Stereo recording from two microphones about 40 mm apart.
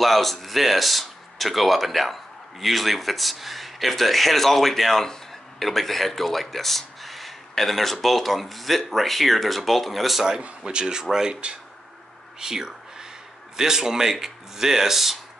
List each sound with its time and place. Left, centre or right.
0.0 s speech: centre
10.6 s speech: right
12.4 s a sound: centre
13.6 s speech: centre